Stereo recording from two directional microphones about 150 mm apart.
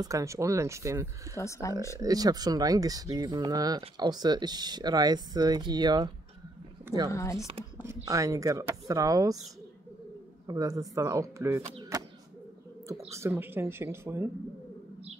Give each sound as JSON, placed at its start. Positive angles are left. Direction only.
{"t": 0.0, "sound": "speech", "side_deg": -20}
{"t": 1.3, "sound": "speech", "side_deg": 20}
{"t": 2.0, "sound": "speech", "side_deg": -25}
{"t": 7.1, "sound": "speech", "side_deg": 20}
{"t": 7.8, "sound": "speech", "side_deg": -20}
{"t": 10.4, "sound": "speech", "side_deg": -25}
{"t": 13.1, "sound": "speech", "side_deg": -15}